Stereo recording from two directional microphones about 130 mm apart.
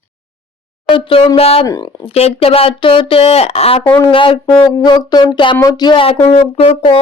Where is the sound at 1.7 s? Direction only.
30° left (ahead or behind).